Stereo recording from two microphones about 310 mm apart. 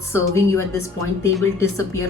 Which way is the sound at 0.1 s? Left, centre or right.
Centre.